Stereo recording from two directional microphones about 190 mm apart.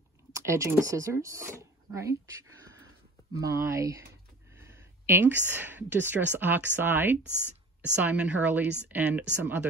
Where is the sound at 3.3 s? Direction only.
15° right (ahead or behind).